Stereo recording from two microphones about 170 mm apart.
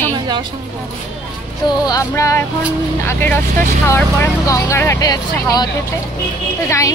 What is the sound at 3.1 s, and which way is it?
Speech, 10° left (ahead or behind).